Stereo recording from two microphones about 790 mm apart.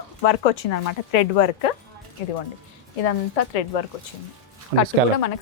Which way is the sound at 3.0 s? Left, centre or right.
Left.